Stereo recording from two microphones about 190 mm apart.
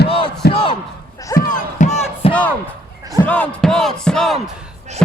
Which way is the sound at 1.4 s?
45° left (ahead or behind).